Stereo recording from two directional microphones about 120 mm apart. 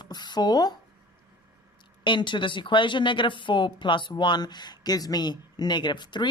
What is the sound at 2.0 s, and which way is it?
Speech, 40° left (ahead or behind).